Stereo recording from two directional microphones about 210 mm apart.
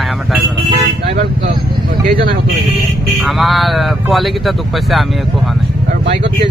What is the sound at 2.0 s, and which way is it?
Vehicle, 45° right (ahead or behind).